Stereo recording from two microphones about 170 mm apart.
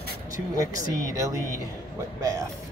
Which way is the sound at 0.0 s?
55° left (ahead or behind).